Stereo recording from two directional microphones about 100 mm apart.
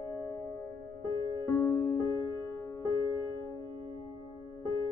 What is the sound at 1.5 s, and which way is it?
Music, 25° left (ahead or behind).